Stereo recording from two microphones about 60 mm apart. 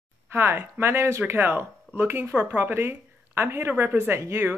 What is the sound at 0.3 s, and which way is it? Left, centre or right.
Speech, right.